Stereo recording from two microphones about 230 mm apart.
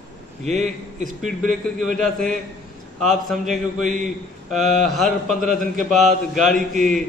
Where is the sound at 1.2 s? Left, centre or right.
Centre.